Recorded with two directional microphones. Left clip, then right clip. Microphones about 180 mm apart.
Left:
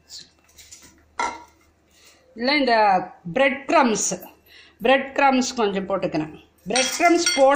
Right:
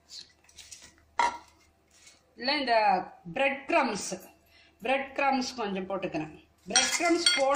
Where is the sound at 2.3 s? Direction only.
40° left (ahead or behind).